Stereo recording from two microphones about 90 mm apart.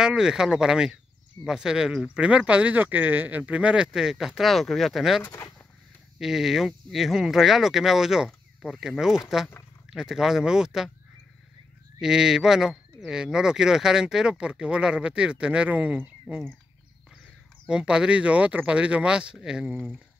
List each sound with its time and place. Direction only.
0.0 s speech: 10° right (ahead or behind)
5.2 s speech: 30° left (ahead or behind)
6.1 s speech: 5° right (ahead or behind)
12.0 s speech: 5° right (ahead or behind)
17.6 s speech: 10° right (ahead or behind)